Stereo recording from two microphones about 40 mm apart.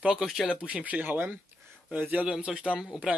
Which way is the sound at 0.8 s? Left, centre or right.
Right.